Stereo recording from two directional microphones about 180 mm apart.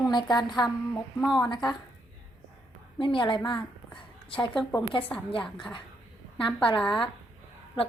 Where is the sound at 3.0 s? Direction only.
30° left (ahead or behind).